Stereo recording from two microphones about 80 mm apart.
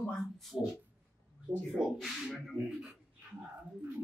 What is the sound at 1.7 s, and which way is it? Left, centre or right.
Speech, centre.